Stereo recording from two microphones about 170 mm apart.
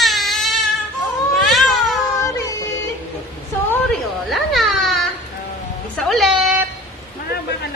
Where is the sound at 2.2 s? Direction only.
20° left (ahead or behind).